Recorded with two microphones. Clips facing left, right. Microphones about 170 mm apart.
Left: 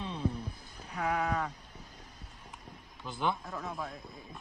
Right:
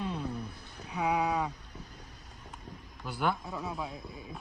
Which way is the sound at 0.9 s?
10° right (ahead or behind).